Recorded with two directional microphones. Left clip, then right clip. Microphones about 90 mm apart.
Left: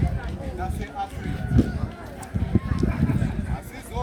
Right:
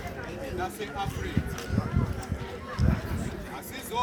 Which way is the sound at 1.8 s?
20° right (ahead or behind).